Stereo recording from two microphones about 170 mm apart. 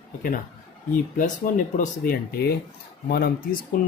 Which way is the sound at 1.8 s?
55° left (ahead or behind).